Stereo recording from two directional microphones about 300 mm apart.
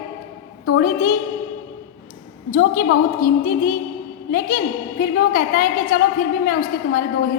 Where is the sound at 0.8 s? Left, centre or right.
Left.